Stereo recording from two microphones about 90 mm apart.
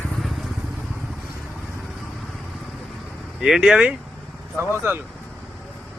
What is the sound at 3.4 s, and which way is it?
Speech, 5° right (ahead or behind).